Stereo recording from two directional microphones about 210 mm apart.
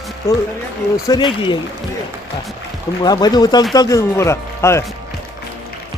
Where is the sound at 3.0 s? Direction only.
20° left (ahead or behind).